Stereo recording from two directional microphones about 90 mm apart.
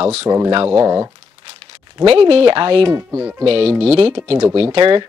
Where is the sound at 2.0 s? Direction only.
90° right; by 2.8 s 65° right (ahead or behind).